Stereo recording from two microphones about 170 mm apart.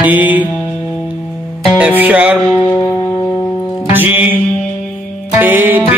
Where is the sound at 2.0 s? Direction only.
5° right (ahead or behind).